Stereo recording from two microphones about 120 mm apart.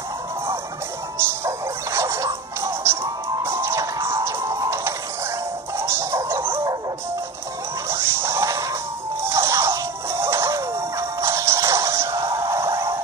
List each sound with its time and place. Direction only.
1.1 s music: 20° right (ahead or behind)
7.9 s a sound: 20° right (ahead or behind)
9.2 s music: 25° right (ahead or behind)